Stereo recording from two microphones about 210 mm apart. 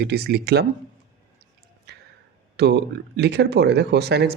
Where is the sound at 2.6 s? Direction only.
50° right (ahead or behind).